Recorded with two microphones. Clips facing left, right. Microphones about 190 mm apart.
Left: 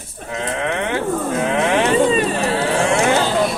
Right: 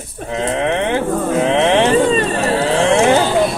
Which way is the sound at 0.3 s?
25° right (ahead or behind).